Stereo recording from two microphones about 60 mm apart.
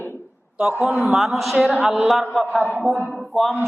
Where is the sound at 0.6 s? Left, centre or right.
Centre.